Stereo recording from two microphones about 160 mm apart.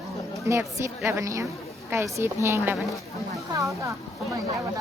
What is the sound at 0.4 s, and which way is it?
A woman's voice, 15° right (ahead or behind).